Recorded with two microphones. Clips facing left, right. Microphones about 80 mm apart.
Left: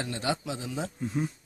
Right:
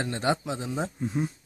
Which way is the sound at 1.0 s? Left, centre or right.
Centre.